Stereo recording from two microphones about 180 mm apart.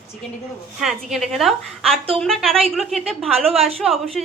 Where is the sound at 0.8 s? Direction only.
Centre (ahead or behind).